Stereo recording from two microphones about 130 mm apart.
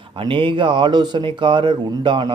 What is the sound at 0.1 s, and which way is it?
Speech, 40° right (ahead or behind).